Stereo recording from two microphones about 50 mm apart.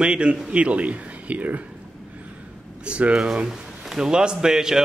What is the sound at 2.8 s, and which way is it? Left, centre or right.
Speech, right.